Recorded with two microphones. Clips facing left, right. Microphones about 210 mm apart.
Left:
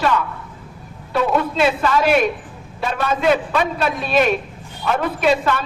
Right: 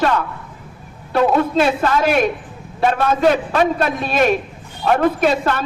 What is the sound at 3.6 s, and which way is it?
Speech, 50° right (ahead or behind).